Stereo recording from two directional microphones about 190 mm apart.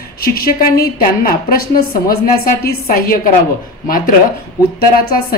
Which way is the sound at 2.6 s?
50° left (ahead or behind).